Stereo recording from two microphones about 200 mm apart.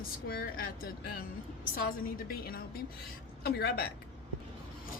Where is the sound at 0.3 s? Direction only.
50° left (ahead or behind).